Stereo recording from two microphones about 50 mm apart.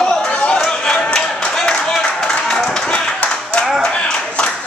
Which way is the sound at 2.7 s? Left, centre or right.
Centre.